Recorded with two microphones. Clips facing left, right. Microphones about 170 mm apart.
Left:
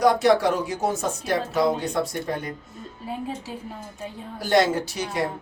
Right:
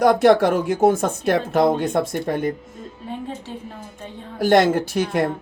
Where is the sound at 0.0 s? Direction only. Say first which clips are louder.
Right 4 dB; 55° right (ahead or behind).